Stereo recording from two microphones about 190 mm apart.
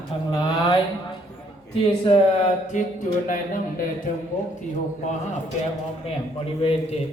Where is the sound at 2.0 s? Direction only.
30° left (ahead or behind).